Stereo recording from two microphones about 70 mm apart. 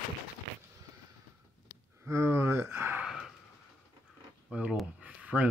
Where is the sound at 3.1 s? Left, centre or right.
Centre.